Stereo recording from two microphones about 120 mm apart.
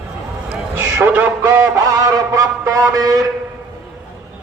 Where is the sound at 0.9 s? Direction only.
15° right (ahead or behind).